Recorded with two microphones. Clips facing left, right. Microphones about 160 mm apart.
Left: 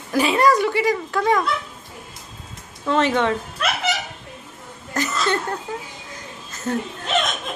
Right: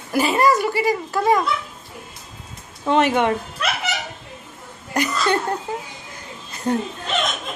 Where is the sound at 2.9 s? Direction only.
15° right (ahead or behind).